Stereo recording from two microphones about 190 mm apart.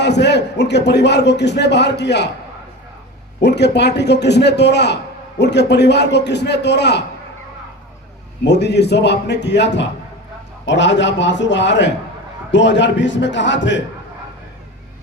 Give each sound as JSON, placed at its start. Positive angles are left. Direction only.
{"t": 0.0, "sound": "a man's voice", "side_deg": 65}
{"t": 3.4, "sound": "a man's voice", "side_deg": 65}
{"t": 8.4, "sound": "a man's voice", "side_deg": 65}